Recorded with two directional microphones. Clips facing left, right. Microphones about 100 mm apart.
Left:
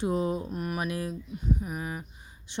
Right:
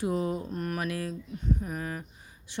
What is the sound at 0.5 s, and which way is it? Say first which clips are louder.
Speech: even; 10° left (ahead or behind).